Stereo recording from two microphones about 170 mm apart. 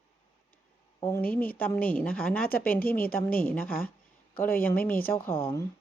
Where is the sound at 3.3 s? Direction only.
60° left (ahead or behind).